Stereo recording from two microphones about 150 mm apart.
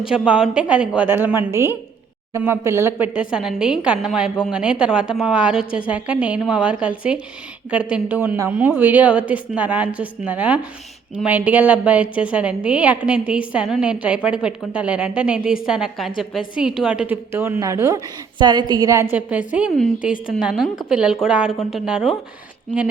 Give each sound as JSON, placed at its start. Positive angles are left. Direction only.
{"t": 0.0, "sound": "a woman's voice", "side_deg": -5}
{"t": 3.2, "sound": "a woman's voice", "side_deg": -5}
{"t": 19.1, "sound": "a woman's voice", "side_deg": -10}